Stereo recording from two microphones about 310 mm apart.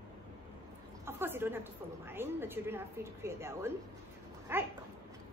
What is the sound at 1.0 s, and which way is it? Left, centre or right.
A woman's voice, centre.